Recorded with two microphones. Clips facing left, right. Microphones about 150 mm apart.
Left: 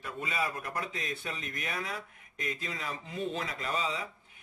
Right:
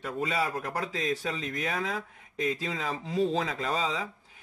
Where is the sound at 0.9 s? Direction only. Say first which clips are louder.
Right 7 dB; 90° right.